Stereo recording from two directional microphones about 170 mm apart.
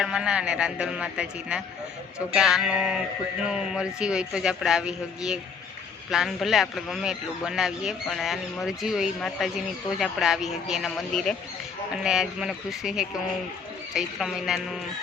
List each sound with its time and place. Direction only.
0.0 s a man's voice: 5° right (ahead or behind)